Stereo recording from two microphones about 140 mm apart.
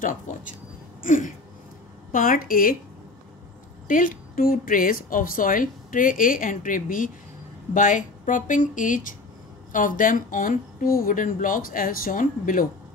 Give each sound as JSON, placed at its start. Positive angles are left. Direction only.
{"t": 0.0, "sound": "speech", "side_deg": 65}
{"t": 1.0, "sound": "a sound", "side_deg": 65}
{"t": 2.1, "sound": "a woman's voice", "side_deg": 85}
{"t": 3.8, "sound": "a woman's voice", "side_deg": 75}